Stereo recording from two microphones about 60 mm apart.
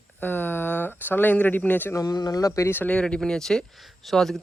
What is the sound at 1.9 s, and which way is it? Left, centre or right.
Speech, left.